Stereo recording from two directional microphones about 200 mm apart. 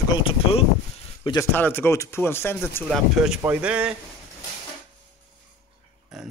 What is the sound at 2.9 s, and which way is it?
Speech, 5° right (ahead or behind).